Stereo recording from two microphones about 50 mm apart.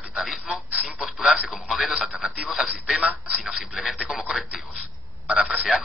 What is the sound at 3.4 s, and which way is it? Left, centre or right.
Speech, centre.